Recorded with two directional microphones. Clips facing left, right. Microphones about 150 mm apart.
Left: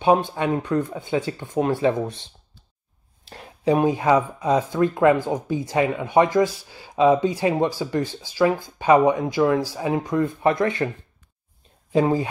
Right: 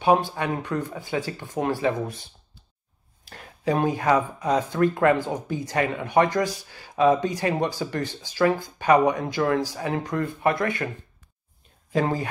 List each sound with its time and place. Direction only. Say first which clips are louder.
0.0 s speech: left 2 dB; 20° left (ahead or behind)
3.3 s a sound: left 3 dB; 30° left (ahead or behind)
3.6 s speech: left 3 dB; 15° left (ahead or behind)
8.7 s speech: left 4 dB; 15° left (ahead or behind)
11.9 s speech: left 5 dB; 15° left (ahead or behind)